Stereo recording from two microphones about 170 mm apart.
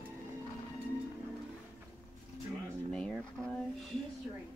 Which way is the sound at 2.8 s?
5° left (ahead or behind).